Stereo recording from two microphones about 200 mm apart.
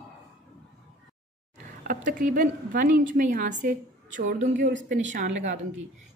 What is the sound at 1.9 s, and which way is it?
A woman's voice, 40° right (ahead or behind).